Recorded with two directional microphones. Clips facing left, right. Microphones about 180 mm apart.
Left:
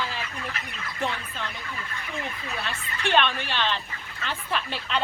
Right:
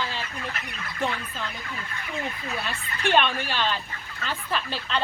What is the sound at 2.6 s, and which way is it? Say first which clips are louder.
Speech: right 2 dB; 15° right (ahead or behind).